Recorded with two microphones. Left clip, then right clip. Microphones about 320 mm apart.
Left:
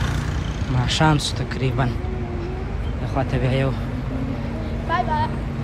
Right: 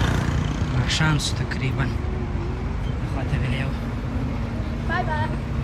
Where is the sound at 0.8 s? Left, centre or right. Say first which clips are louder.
Left 4 dB; centre.